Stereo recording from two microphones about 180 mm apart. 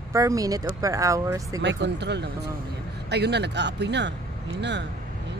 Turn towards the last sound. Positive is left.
turn(degrees=-75)  # may be behind; listen again after turning